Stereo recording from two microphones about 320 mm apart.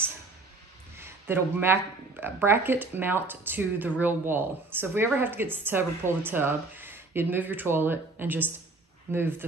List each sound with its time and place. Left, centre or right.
0.9 s speech: centre